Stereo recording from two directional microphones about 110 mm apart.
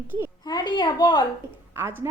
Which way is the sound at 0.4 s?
40° left (ahead or behind).